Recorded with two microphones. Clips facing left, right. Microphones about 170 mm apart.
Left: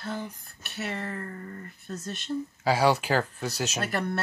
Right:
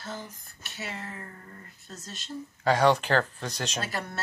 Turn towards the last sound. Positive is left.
turn(degrees=60)  # may be behind; listen again after turning